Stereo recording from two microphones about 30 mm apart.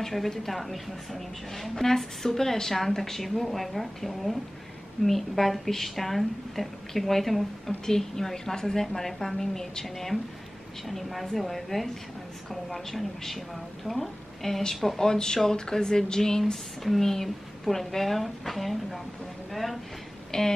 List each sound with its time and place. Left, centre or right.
0.0 s a woman's voice: centre
16.8 s a woman's voice: centre
20.2 s a sound: centre